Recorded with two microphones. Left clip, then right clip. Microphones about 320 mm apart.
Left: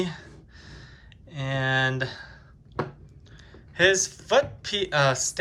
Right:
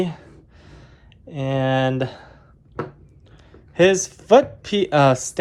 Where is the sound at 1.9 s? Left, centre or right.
Centre.